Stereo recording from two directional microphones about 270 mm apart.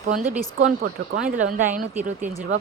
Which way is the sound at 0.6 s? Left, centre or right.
Right.